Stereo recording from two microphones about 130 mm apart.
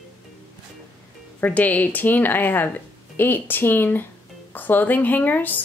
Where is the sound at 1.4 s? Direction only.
10° left (ahead or behind).